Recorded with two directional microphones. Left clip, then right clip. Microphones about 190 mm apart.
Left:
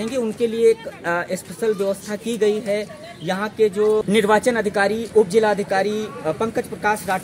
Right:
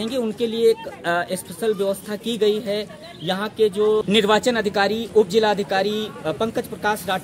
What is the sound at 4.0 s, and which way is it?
Speech, 5° right (ahead or behind).